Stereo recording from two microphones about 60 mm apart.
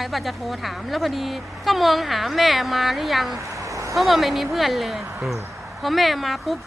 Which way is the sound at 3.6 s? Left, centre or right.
Right.